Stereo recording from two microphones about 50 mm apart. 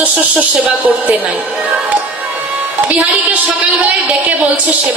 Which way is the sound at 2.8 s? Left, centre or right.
Right.